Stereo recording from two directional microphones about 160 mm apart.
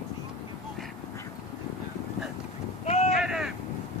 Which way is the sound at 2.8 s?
40° left (ahead or behind).